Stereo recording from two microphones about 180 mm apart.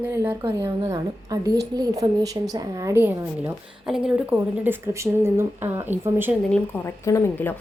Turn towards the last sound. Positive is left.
turn(degrees=15)  # may be behind; listen again after turning